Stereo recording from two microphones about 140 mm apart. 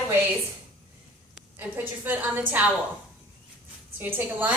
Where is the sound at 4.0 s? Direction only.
15° right (ahead or behind).